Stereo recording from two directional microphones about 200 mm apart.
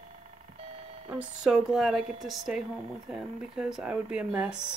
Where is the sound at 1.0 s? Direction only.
5° right (ahead or behind).